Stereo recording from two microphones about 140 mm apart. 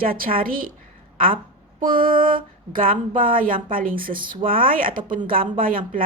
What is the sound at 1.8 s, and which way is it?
A woman's voice, 85° right.